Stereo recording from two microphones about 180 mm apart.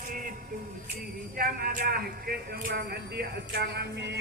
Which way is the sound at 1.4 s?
55° right (ahead or behind).